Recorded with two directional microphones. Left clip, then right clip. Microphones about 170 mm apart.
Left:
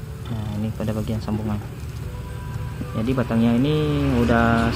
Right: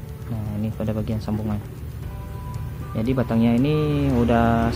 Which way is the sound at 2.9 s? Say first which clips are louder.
Even; 10° right (ahead or behind).